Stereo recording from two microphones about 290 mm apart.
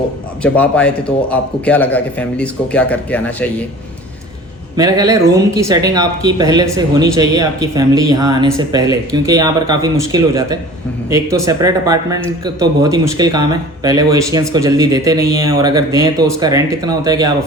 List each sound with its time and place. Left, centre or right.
0.4 s a man's voice: centre
4.8 s speech: centre